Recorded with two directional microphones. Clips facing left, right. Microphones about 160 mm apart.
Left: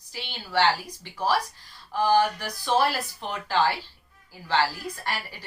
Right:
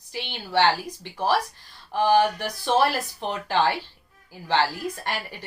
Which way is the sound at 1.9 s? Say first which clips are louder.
Right 2 dB; 20° right (ahead or behind).